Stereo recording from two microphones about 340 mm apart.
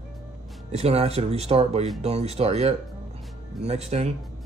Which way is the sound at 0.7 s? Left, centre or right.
Centre.